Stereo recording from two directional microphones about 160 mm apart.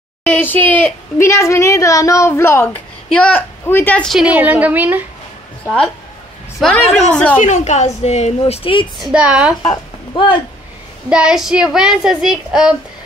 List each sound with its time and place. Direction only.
0.2 s a woman's voice: 10° left (ahead or behind); by 5.0 s 10° right (ahead or behind)
6.6 s a woman's voice: 5° left (ahead or behind)
7.3 s a woman's voice: 50° left (ahead or behind)
9.0 s a woman's voice: 5° right (ahead or behind)
9.6 s speech: 30° left (ahead or behind)
11.1 s a woman's voice: 5° right (ahead or behind)